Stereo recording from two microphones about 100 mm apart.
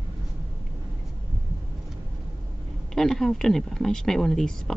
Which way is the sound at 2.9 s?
5° left (ahead or behind).